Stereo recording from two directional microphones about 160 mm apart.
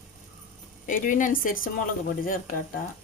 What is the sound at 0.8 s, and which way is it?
Speech, 55° left (ahead or behind).